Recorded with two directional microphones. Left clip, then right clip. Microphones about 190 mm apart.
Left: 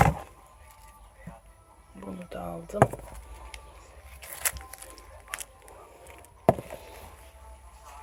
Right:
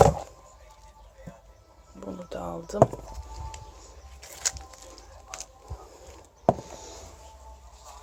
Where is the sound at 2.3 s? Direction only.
10° right (ahead or behind).